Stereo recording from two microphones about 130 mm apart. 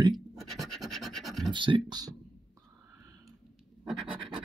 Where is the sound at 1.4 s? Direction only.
40° right (ahead or behind).